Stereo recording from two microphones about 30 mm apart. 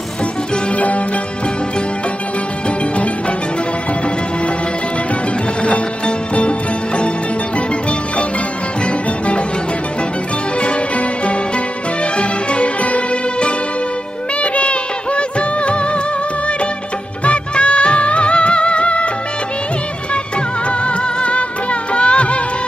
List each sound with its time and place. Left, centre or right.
0.7 s music: left
5.6 s music: left
8.8 s music: left
10.6 s music: left
14.4 s music of bollywood: left
17.2 s music: left
20.8 s music: left